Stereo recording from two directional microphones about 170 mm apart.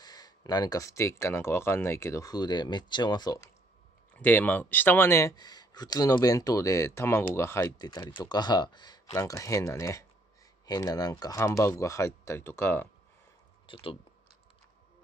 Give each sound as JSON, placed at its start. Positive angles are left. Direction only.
{"t": 0.0, "sound": "speech", "side_deg": 25}
{"t": 4.2, "sound": "speech", "side_deg": 10}
{"t": 13.7, "sound": "speech", "side_deg": 30}